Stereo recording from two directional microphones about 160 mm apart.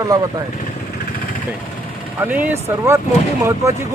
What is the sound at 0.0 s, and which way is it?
Speech, 20° right (ahead or behind).